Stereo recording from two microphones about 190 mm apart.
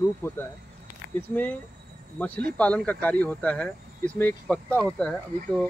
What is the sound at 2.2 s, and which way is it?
Speech, 10° left (ahead or behind).